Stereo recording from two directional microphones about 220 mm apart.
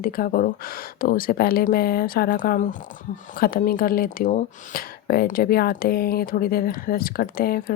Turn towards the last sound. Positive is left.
turn(degrees=40)  # may be behind; listen again after turning